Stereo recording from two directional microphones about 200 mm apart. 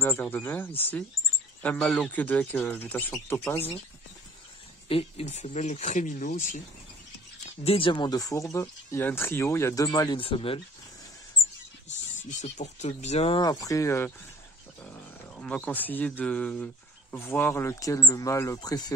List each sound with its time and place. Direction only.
0.0 s speech: 10° left (ahead or behind)
4.8 s speech: 30° left (ahead or behind)
7.6 s speech: 25° left (ahead or behind)
12.3 s speech: 40° left (ahead or behind); by 14.1 s 15° left (ahead or behind)
15.3 s speech: 5° left (ahead or behind)